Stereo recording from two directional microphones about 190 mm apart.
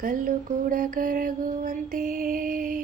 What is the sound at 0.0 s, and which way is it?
Mantra, 45° right (ahead or behind).